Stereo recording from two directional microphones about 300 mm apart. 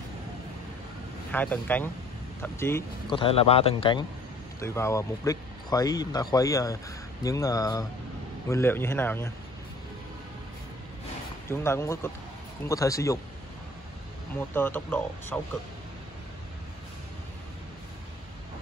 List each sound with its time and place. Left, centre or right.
1.3 s speech: centre
11.4 s speech: centre
14.5 s speech: centre